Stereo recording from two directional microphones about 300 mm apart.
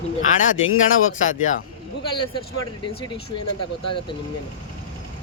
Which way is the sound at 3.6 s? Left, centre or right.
Left.